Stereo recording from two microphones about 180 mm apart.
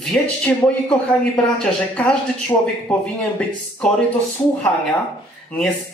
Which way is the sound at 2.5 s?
20° left (ahead or behind).